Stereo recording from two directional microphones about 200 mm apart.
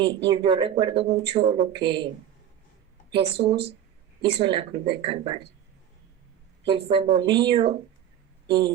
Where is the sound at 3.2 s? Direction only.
55° right (ahead or behind).